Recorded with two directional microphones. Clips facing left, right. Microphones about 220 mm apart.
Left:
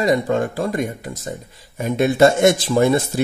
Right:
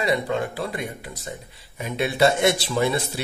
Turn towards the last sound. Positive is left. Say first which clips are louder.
# left 7 dB
turn(degrees=45)  # may be behind; listen again after turning